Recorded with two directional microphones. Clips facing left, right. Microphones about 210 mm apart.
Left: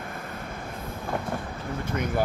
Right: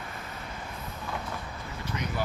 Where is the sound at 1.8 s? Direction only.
50° left (ahead or behind).